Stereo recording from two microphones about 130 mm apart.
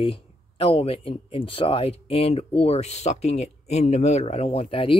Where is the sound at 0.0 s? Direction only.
45° left (ahead or behind).